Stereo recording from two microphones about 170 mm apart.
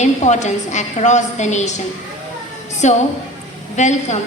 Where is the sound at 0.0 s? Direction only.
45° left (ahead or behind).